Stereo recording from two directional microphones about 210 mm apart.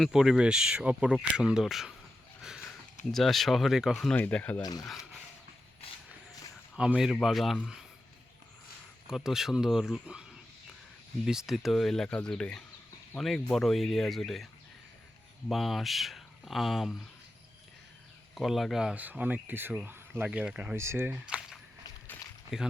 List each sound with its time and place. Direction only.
0.0 s speech: centre (ahead or behind)
2.4 s a sound: centre (ahead or behind)
3.1 s speech: centre (ahead or behind)
4.6 s speech: 20° left (ahead or behind)
6.7 s speech: 5° right (ahead or behind)
9.0 s speech: centre (ahead or behind)
11.3 s speech: centre (ahead or behind)
15.4 s speech: centre (ahead or behind)
18.3 s speech: centre (ahead or behind)